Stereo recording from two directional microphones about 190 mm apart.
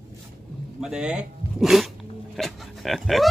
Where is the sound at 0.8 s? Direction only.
5° right (ahead or behind).